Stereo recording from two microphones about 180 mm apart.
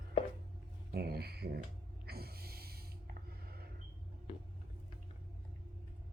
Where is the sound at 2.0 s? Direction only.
60° right (ahead or behind).